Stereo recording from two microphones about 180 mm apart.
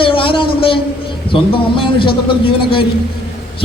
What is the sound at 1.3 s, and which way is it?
A man's voice, 30° left (ahead or behind).